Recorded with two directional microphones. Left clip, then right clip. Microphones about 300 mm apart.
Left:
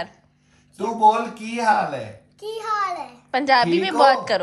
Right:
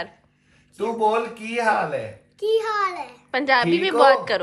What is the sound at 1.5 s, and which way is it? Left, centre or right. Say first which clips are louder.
Speech: left 2 dB; right.